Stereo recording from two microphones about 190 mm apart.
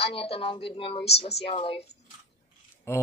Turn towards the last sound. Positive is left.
turn(degrees=15)  # may be behind; listen again after turning